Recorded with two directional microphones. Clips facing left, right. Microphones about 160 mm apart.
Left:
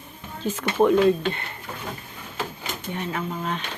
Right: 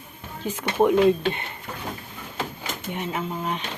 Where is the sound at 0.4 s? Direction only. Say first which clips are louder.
Left 1 dB; 15° right (ahead or behind).